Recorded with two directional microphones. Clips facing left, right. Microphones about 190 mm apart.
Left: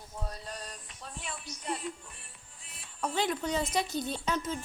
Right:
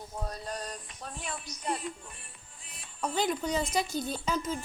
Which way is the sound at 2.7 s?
Centre (ahead or behind).